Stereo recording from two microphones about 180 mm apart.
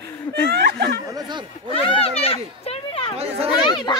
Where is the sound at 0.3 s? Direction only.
65° right (ahead or behind).